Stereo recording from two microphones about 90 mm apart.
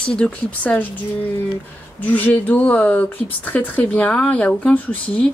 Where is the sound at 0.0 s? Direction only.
10° left (ahead or behind).